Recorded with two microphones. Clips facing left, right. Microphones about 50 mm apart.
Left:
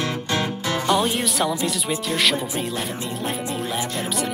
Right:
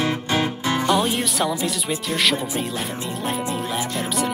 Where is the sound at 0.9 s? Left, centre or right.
Centre.